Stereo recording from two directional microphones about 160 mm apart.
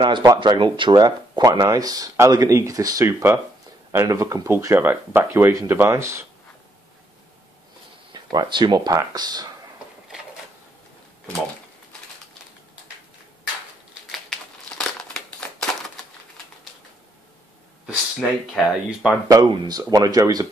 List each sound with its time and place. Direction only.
0.0 s speech: 25° right (ahead or behind)
8.1 s speech: 30° right (ahead or behind)
14.1 s crumpling: 5° left (ahead or behind)
17.8 s speech: centre (ahead or behind)
19.5 s speech: 25° right (ahead or behind)